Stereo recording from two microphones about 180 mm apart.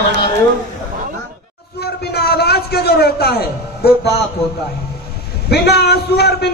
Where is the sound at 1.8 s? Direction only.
65° left (ahead or behind).